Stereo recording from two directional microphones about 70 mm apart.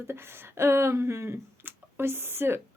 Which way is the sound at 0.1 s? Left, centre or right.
Right.